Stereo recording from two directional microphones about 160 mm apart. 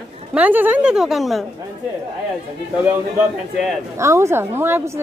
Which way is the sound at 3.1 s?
Centre (ahead or behind).